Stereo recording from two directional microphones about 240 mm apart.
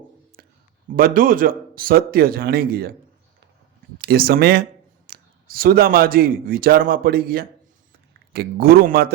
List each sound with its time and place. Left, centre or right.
0.9 s speech: right
3.9 s a man's voice: right